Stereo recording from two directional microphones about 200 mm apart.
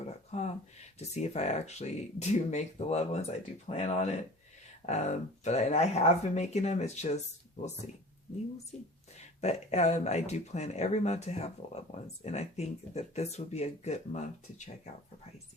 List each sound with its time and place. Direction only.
0.3 s a sound: 35° left (ahead or behind)
0.9 s speech: 35° left (ahead or behind)
9.1 s speech: 35° left (ahead or behind)